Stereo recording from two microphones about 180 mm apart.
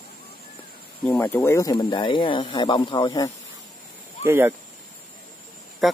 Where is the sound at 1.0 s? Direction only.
5° left (ahead or behind); by 3.3 s 25° left (ahead or behind).